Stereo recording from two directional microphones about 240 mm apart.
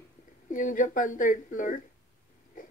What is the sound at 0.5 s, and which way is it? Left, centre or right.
Speech, left.